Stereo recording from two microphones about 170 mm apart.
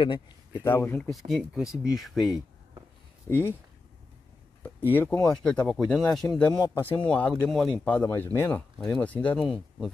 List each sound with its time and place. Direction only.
0.0 s a man's voice: 25° left (ahead or behind)
0.6 s speech: 15° left (ahead or behind)
1.1 s speech: centre (ahead or behind)
3.3 s speech: 10° left (ahead or behind)
4.6 s speech: 10° left (ahead or behind)
5.4 s speech: centre (ahead or behind)
8.7 s speech: centre (ahead or behind)